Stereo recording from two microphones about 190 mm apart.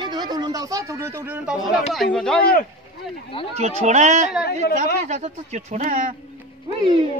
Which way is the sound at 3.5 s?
35° right (ahead or behind).